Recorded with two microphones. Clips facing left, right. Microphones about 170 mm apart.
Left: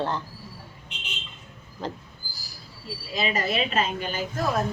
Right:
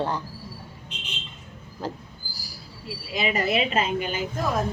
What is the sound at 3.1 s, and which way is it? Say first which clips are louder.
Speech: right 2 dB; 20° right (ahead or behind).